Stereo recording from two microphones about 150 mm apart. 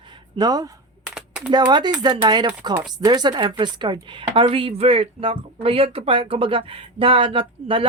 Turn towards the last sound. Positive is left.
turn(degrees=-35)  # may be behind; listen again after turning